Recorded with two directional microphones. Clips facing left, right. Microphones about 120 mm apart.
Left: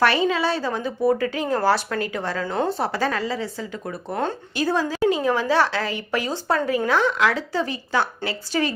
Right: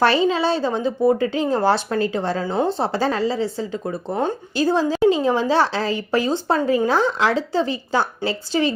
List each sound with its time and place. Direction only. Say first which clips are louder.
0.0 s a woman's voice: right 2 dB; 30° right (ahead or behind)
4.1 s speech: right 3 dB; 10° right (ahead or behind)
4.5 s a woman's voice: right 5 dB; 30° right (ahead or behind)